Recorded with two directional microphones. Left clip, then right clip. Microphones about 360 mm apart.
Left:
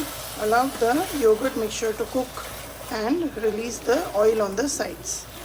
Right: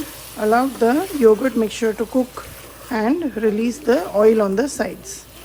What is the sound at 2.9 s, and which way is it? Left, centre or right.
Speech, right.